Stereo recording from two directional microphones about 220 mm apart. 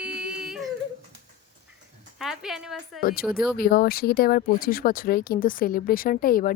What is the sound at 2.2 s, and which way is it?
Speech, centre (ahead or behind).